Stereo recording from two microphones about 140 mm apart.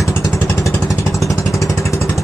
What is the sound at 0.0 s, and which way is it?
Vehicle, 20° left (ahead or behind).